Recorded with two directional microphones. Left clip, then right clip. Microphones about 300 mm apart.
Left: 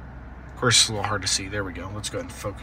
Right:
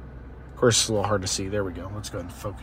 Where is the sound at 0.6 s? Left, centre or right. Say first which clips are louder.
Left 1 dB; centre.